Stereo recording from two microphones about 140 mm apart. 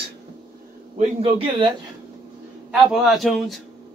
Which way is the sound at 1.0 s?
45° right (ahead or behind).